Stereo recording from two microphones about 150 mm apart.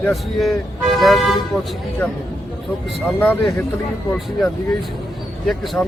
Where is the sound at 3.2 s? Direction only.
15° left (ahead or behind).